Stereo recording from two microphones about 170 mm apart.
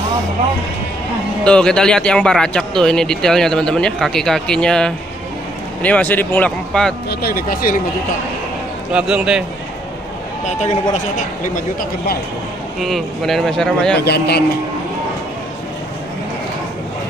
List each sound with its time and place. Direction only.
1.4 s a man's voice: 5° left (ahead or behind)
7.1 s speech: 65° left (ahead or behind)
8.9 s a man's voice: 5° right (ahead or behind)
10.4 s speech: 40° left (ahead or behind)
12.8 s a man's voice: centre (ahead or behind)
13.9 s speech: 70° left (ahead or behind)